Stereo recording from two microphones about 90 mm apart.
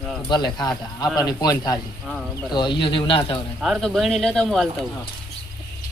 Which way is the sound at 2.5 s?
60° left (ahead or behind).